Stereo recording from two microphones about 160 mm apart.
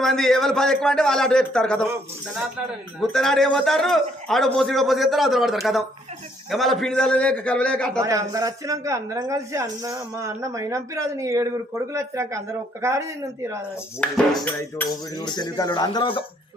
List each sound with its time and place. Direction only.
0.0 s a man's voice: centre (ahead or behind)
3.0 s a man's voice: centre (ahead or behind)
8.0 s speech: 20° right (ahead or behind)
14.0 s music: 10° left (ahead or behind)
15.1 s speech: 25° left (ahead or behind)